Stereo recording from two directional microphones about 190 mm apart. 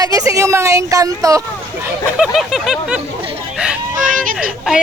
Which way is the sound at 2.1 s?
5° right (ahead or behind).